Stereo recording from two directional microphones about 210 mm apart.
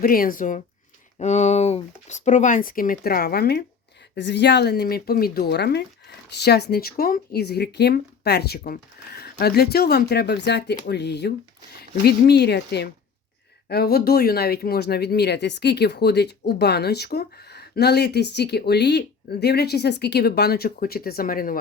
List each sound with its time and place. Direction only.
0.0 s speech: 40° left (ahead or behind)